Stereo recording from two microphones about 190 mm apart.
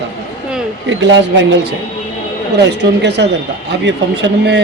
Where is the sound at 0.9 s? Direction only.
75° right (ahead or behind).